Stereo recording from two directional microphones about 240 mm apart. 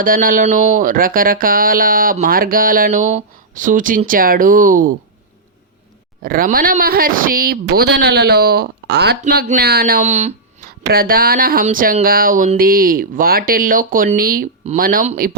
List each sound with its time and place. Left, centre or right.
0.0 s speech: right
6.2 s speech: right